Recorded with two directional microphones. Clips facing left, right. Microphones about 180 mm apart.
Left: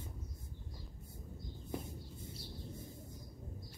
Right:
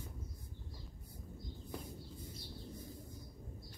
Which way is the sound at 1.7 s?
25° left (ahead or behind).